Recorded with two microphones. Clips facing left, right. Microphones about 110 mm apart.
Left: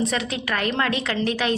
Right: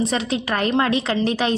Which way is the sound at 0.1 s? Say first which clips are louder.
Right 3 dB; 25° right (ahead or behind).